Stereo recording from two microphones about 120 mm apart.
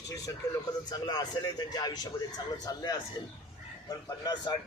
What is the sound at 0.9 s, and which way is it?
A man's voice, 30° left (ahead or behind).